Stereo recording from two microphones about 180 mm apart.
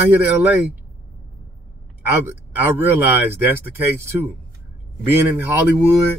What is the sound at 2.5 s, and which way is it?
Speech, 10° right (ahead or behind).